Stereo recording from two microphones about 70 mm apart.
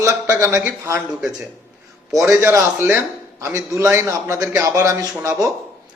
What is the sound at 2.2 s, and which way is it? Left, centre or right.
A man's voice, right.